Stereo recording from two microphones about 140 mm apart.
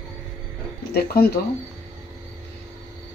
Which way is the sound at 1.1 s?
90° left.